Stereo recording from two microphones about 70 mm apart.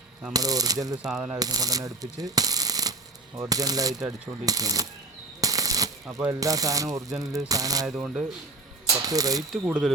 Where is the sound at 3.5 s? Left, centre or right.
Right.